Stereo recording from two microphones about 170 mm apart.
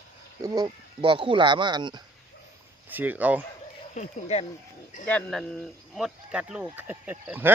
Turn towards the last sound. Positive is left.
turn(degrees=-10)  # may be behind; listen again after turning